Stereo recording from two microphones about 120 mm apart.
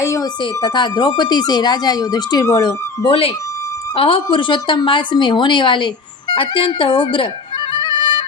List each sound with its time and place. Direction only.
0.0 s a sound: 25° left (ahead or behind)
0.6 s speech: 40° left (ahead or behind)
2.6 s a woman's voice: 45° left (ahead or behind)
7.7 s music: 40° left (ahead or behind)